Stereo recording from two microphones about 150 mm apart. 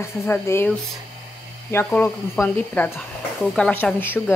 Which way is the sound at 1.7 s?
15° left (ahead or behind).